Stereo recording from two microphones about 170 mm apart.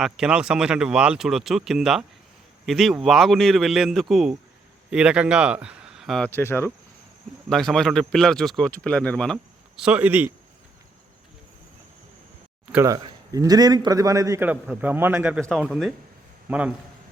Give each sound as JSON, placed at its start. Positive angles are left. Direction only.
{"t": 0.0, "sound": "a man's voice", "side_deg": -5}
{"t": 7.5, "sound": "speech", "side_deg": 0}
{"t": 12.7, "sound": "a man's voice", "side_deg": -15}